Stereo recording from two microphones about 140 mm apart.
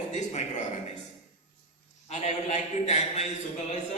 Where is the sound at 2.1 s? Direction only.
50° left (ahead or behind).